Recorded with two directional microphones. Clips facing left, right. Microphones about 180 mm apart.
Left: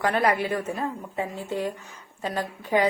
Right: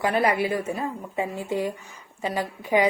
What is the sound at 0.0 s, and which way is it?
A woman's voice, 10° right (ahead or behind).